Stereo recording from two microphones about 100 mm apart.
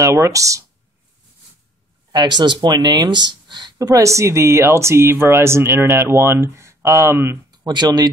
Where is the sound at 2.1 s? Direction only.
45° right (ahead or behind).